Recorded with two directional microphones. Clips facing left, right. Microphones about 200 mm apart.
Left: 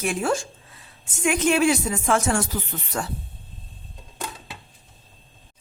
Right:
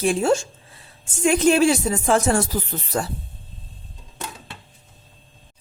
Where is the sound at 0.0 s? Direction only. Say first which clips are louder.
Right 5 dB; 30° right (ahead or behind).